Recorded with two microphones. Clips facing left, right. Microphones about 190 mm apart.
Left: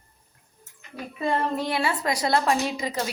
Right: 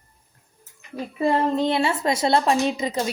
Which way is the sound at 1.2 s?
25° right (ahead or behind).